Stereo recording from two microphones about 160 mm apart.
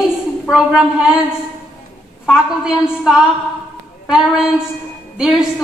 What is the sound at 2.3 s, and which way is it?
A woman's voice, 5° right (ahead or behind).